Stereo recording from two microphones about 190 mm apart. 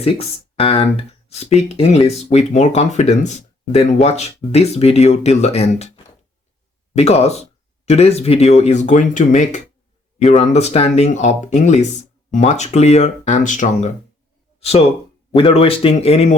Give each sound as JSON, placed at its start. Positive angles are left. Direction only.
{"t": 0.0, "sound": "speech", "side_deg": 30}
{"t": 6.9, "sound": "speech", "side_deg": 35}